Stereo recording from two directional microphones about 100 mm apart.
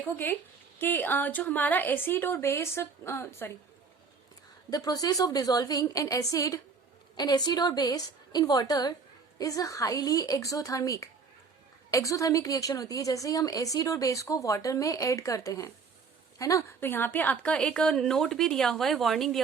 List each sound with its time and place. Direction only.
0.0 s a woman's voice: 20° left (ahead or behind)
4.7 s a woman's voice: 40° left (ahead or behind); by 19.4 s centre (ahead or behind)